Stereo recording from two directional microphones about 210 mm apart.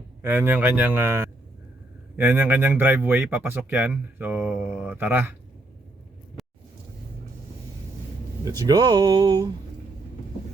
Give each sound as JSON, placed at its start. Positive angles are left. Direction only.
{"t": 0.2, "sound": "speech", "side_deg": -10}
{"t": 6.4, "sound": "vehicle", "side_deg": 0}
{"t": 8.4, "sound": "speech", "side_deg": -15}